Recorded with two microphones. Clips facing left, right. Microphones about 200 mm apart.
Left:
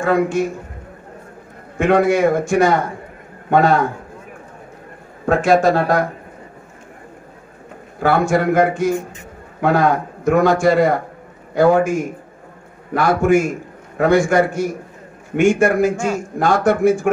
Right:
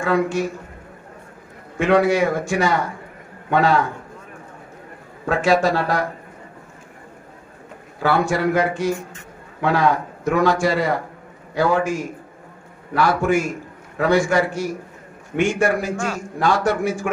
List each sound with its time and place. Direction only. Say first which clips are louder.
0.0 s a man's voice: left 3 dB; 50° left (ahead or behind)
1.8 s a man's voice: left 2 dB; 50° left (ahead or behind)
5.2 s a man's voice: left 4 dB; 50° left (ahead or behind)
8.0 s a man's voice: left 3 dB; 50° left (ahead or behind)